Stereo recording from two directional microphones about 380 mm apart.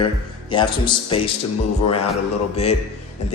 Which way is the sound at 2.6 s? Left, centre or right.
Centre.